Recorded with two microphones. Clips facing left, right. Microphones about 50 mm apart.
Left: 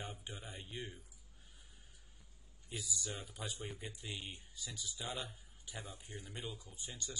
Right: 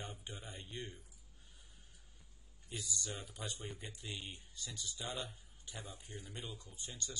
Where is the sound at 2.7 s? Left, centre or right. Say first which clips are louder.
Even; centre.